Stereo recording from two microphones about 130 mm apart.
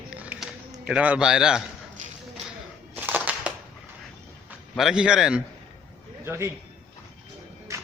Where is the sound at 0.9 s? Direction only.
10° right (ahead or behind).